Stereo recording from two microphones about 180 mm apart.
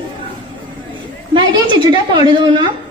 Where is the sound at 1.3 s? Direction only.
25° right (ahead or behind).